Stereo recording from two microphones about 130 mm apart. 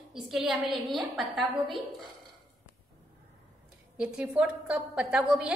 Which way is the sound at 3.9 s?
5° right (ahead or behind).